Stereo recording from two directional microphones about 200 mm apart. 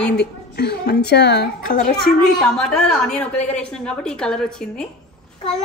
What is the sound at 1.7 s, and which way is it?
Speech, 40° left (ahead or behind).